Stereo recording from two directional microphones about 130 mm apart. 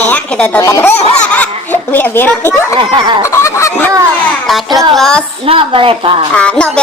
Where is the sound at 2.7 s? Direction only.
40° right (ahead or behind).